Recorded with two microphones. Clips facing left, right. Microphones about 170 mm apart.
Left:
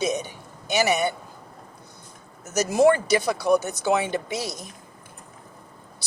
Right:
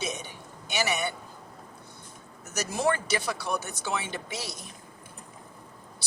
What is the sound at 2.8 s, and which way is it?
Speech, 40° left (ahead or behind).